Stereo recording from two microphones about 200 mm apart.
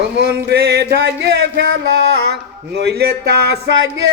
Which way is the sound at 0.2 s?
55° right (ahead or behind).